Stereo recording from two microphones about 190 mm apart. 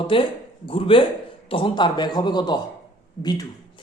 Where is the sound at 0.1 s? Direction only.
30° left (ahead or behind).